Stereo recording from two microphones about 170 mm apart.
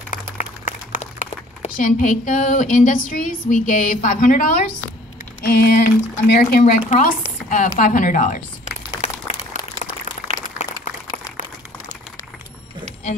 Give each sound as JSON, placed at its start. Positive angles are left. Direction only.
{"t": 0.1, "sound": "speech", "side_deg": 45}
{"t": 5.4, "sound": "speech", "side_deg": 65}
{"t": 6.6, "sound": "speech", "side_deg": 45}
{"t": 9.0, "sound": "a sound", "side_deg": 40}